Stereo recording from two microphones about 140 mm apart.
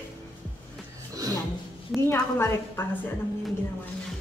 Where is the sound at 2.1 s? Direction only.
15° left (ahead or behind).